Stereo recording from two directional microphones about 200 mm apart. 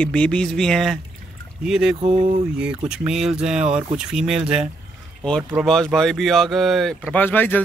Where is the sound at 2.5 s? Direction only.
5° right (ahead or behind).